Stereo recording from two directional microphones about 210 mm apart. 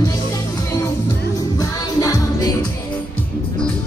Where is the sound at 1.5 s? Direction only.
15° left (ahead or behind).